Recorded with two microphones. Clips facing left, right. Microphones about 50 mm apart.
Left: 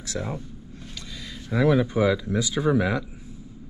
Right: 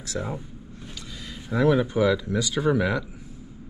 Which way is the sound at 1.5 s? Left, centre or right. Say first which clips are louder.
Even; centre.